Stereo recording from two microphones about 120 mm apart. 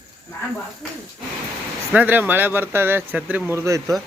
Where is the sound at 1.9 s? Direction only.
15° right (ahead or behind).